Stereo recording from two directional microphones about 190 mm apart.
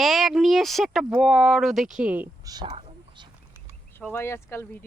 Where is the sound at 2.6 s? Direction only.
30° right (ahead or behind).